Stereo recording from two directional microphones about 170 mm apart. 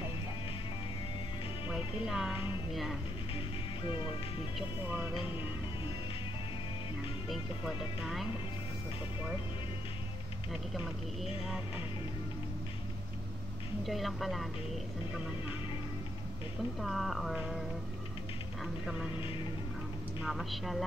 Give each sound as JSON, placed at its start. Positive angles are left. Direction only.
{"t": 1.7, "sound": "speech", "side_deg": 0}
{"t": 4.8, "sound": "speech", "side_deg": -10}
{"t": 7.2, "sound": "speech", "side_deg": 0}
{"t": 13.8, "sound": "speech", "side_deg": 0}
{"t": 16.8, "sound": "speech", "side_deg": 0}